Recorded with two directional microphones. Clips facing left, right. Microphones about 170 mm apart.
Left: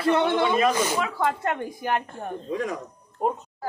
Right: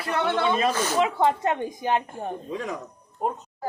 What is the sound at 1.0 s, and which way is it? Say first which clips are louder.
A woman's voice: right 3 dB; 20° right (ahead or behind).